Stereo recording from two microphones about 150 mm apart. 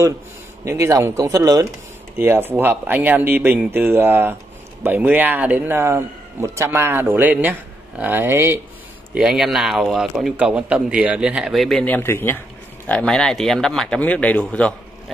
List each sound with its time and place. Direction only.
0.7 s a man's voice: 20° right (ahead or behind)
9.1 s a man's voice: 5° right (ahead or behind)